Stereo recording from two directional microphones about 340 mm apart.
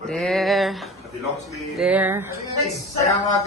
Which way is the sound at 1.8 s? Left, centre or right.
Centre.